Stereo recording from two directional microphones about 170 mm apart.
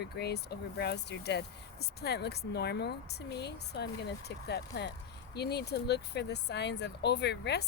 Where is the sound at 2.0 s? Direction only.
75° left (ahead or behind).